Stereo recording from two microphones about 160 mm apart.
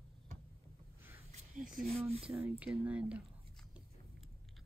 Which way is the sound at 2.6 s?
5° right (ahead or behind).